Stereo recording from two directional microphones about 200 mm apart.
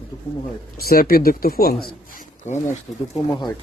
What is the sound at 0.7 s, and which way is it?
Speech, 50° left (ahead or behind).